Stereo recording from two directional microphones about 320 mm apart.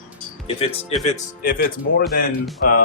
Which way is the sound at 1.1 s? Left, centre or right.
Left.